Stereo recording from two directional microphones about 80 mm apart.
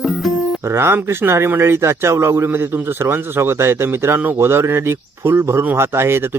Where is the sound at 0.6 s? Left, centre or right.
Right.